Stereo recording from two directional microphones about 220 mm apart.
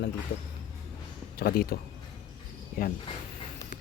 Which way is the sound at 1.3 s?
45° left (ahead or behind).